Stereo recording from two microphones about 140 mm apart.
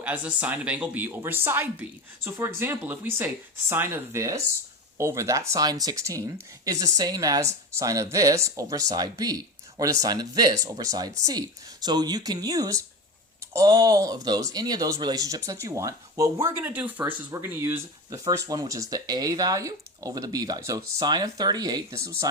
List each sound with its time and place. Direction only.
0.0 s a woman's voice: 10° right (ahead or behind)